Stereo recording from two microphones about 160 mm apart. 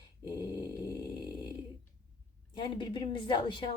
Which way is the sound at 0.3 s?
25° left (ahead or behind).